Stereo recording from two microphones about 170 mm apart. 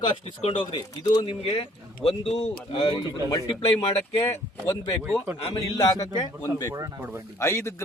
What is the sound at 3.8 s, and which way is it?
Speech, 35° left (ahead or behind).